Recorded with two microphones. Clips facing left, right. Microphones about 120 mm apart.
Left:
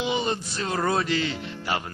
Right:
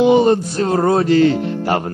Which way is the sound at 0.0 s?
50° right (ahead or behind).